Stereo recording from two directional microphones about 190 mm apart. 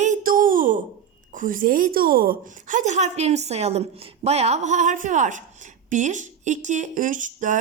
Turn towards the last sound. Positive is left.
turn(degrees=-40)  # may be behind; listen again after turning